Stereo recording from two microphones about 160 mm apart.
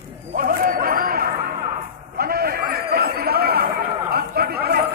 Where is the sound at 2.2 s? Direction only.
70° right (ahead or behind).